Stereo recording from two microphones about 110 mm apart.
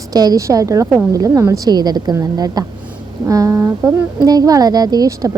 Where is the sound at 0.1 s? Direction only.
35° right (ahead or behind).